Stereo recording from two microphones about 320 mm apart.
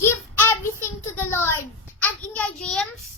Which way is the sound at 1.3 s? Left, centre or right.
Centre.